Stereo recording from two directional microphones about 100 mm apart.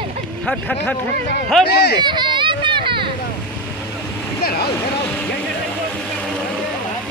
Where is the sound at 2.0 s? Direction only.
50° right (ahead or behind).